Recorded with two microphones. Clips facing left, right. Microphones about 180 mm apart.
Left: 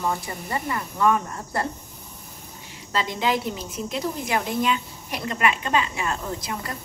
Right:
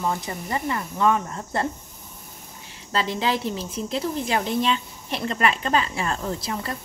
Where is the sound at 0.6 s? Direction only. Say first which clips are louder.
Even; 25° right (ahead or behind).